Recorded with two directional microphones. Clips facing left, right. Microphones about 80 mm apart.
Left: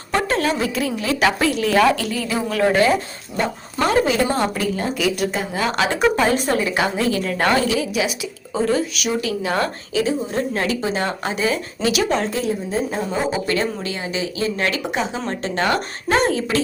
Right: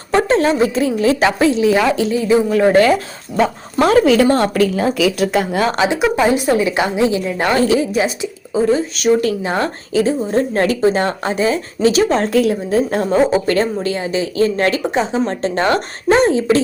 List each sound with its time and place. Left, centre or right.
0.1 s a woman's voice: right
3.3 s speech: right
5.9 s a woman's voice: centre
7.7 s a woman's voice: right
8.5 s a woman's voice: right
9.0 s a woman's voice: right
9.5 s a woman's voice: right
10.0 s a woman's voice: right
12.3 s speech: right
13.1 s a woman's voice: right